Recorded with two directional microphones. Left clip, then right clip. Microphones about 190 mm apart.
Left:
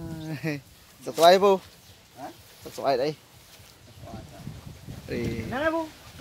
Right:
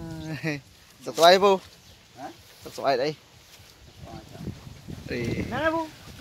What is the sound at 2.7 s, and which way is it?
Speech, centre (ahead or behind).